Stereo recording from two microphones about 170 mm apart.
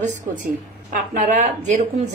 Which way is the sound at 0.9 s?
45° right (ahead or behind).